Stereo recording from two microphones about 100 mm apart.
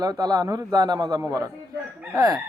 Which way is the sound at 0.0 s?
40° right (ahead or behind).